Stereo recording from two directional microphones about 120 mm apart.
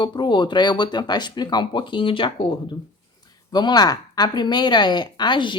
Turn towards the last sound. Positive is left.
turn(degrees=40)  # may be behind; listen again after turning